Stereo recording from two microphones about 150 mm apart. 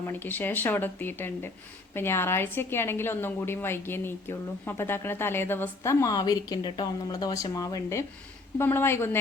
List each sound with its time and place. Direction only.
0.1 s a woman's voice: 15° left (ahead or behind)